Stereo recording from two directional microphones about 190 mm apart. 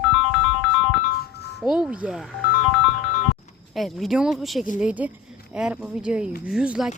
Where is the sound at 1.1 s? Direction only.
55° left (ahead or behind).